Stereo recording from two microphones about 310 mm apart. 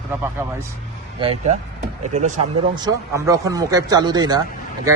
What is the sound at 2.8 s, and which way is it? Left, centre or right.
Speech, centre.